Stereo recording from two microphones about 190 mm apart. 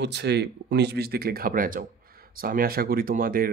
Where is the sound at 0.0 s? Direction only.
65° right (ahead or behind).